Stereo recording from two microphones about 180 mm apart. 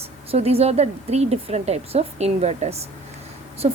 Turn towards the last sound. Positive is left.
turn(degrees=-30)  # may be behind; listen again after turning